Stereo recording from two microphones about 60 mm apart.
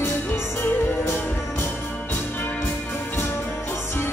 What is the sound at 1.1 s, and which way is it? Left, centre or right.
Music, left.